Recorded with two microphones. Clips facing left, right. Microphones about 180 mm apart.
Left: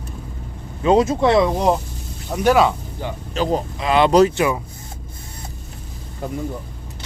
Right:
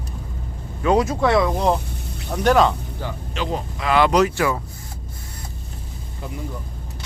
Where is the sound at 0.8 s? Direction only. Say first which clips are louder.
Left 3 dB; 25° left (ahead or behind).